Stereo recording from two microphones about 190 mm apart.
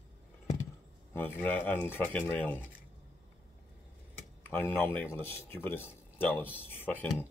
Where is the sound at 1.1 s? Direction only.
10° left (ahead or behind).